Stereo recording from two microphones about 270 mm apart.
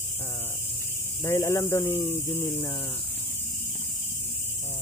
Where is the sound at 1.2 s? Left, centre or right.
Centre.